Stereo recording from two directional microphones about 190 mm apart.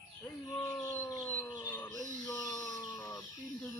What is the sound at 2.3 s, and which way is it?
Chicken, 20° left (ahead or behind).